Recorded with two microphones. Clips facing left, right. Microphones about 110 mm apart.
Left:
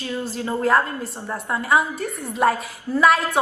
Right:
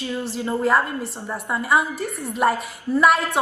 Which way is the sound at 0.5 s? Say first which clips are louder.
Left 1 dB; centre (ahead or behind).